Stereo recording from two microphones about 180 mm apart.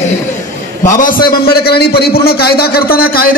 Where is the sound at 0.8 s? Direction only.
50° left (ahead or behind).